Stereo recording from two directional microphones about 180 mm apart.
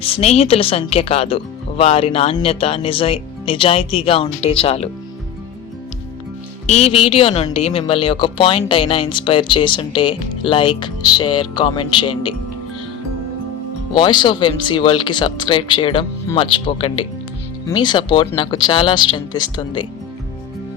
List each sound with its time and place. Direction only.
0.0 s speech: 35° left (ahead or behind)
6.7 s speech: 35° left (ahead or behind)
13.9 s speech: 25° left (ahead or behind)